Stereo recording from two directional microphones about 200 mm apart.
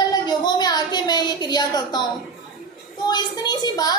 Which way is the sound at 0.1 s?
20° left (ahead or behind).